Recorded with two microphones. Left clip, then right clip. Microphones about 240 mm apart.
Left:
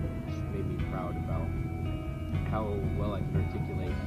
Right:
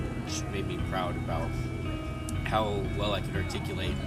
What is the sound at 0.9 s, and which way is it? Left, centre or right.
Speech, right.